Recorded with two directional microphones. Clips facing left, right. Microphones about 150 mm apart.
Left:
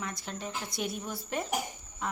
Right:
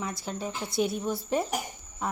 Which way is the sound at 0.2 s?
5° right (ahead or behind).